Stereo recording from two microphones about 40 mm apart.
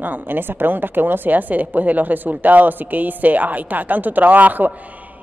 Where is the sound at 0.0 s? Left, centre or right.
Right.